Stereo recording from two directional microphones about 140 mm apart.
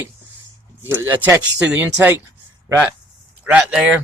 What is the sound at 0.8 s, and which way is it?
Speech, 15° right (ahead or behind).